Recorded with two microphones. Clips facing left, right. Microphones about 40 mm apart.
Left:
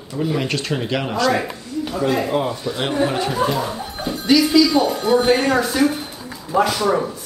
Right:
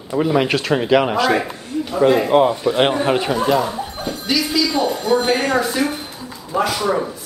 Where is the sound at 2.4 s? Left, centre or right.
Right.